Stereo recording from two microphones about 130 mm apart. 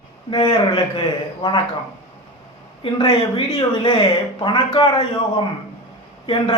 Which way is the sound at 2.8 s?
40° left (ahead or behind).